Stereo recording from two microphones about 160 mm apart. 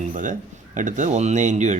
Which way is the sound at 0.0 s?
55° right (ahead or behind).